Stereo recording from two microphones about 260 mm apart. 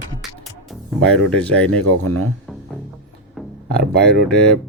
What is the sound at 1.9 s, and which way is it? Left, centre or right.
Speech, right.